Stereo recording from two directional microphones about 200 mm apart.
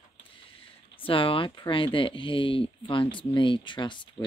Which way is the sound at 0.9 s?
25° left (ahead or behind).